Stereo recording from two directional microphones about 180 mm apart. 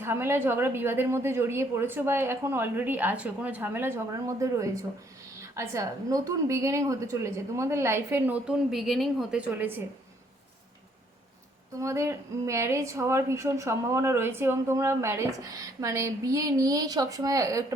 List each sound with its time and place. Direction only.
0.0 s speech: 15° right (ahead or behind)
11.8 s speech: 15° right (ahead or behind)